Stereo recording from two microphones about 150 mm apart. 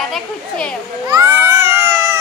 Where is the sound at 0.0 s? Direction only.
5° left (ahead or behind).